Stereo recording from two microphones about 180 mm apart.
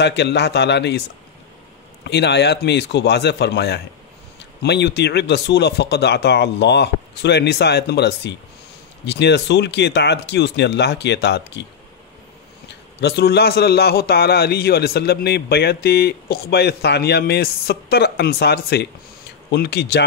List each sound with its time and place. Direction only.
0.0 s speech: 70° left (ahead or behind)
2.0 s speech: 70° left (ahead or behind)
12.6 s a man's voice: 65° left (ahead or behind)